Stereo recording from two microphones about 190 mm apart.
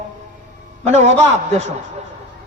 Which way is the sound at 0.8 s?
35° right (ahead or behind).